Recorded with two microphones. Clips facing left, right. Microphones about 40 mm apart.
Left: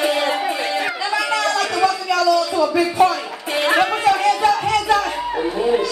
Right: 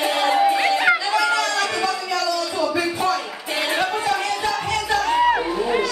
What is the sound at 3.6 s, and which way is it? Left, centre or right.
Music, left.